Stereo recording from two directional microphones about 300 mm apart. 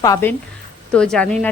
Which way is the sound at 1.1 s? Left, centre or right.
Centre.